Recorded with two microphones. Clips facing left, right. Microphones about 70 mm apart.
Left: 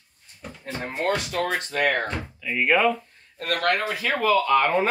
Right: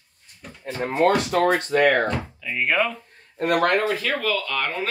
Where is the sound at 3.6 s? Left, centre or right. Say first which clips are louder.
Even; centre.